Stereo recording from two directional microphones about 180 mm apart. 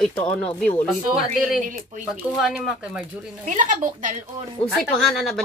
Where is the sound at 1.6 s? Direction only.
45° right (ahead or behind).